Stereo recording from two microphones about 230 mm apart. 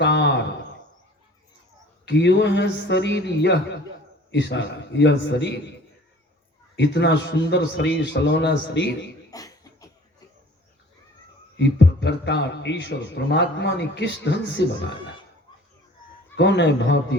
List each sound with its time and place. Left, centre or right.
0.0 s a sound: left
2.0 s a man's voice: left
6.7 s a man's voice: left
9.3 s cough: centre
11.5 s a man's voice: left
16.3 s a man's voice: left